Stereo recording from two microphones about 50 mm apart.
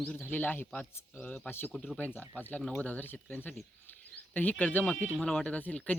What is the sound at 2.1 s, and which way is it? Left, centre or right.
Speech, left.